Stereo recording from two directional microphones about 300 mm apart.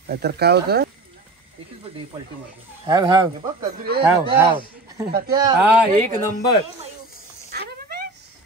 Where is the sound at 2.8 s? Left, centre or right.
Centre.